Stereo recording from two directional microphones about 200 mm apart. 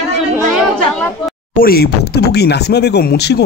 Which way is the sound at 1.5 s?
50° left (ahead or behind).